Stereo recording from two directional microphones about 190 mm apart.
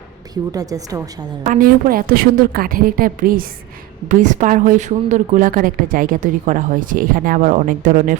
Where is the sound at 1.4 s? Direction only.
45° right (ahead or behind).